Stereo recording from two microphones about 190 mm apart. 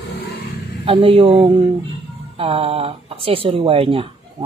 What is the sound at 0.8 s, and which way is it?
Speech, 30° right (ahead or behind).